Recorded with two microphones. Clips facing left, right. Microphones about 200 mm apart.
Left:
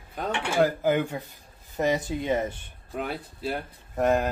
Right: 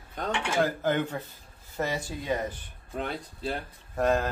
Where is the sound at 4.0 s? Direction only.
20° left (ahead or behind).